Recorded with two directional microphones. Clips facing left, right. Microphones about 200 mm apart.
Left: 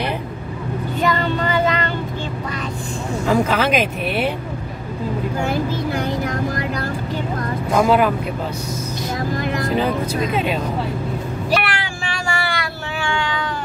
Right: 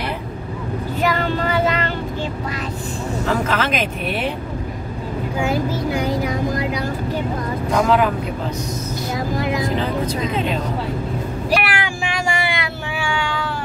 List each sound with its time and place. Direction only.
1.0 s child singing: 5° right (ahead or behind)
3.3 s speech: 10° left (ahead or behind)
6.0 s vehicle: 10° right (ahead or behind)
7.8 s speech: 10° left (ahead or behind)
10.0 s speech: 10° left (ahead or behind)
11.5 s vehicle: 10° right (ahead or behind)
13.0 s cat: 10° right (ahead or behind)